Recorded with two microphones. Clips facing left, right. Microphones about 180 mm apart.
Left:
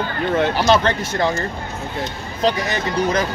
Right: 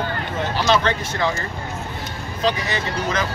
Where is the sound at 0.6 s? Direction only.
45° left (ahead or behind).